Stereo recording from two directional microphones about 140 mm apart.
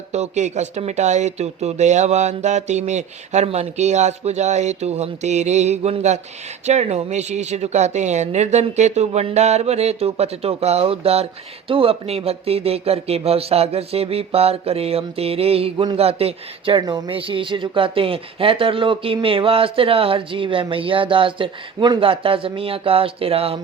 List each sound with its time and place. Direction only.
0.1 s speech: 55° right (ahead or behind)